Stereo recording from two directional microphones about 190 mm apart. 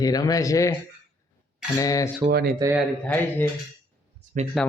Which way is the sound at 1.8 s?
20° left (ahead or behind).